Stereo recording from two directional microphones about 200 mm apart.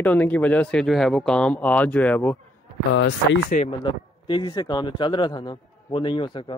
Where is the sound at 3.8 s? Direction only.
25° left (ahead or behind).